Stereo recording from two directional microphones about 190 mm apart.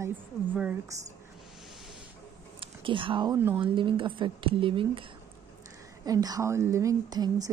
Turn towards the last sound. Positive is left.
turn(degrees=-20)  # may be behind; listen again after turning